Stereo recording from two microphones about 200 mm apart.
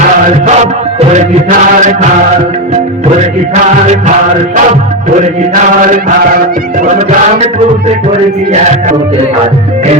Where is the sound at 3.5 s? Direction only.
35° right (ahead or behind).